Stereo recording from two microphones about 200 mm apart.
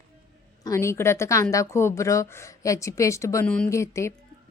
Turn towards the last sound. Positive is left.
turn(degrees=15)  # may be behind; listen again after turning